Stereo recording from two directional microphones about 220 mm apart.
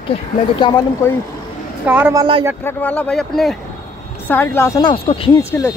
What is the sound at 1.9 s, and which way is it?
Speech, 10° right (ahead or behind).